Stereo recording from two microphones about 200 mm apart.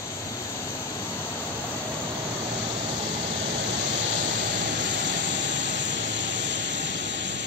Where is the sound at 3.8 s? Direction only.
65° right (ahead or behind).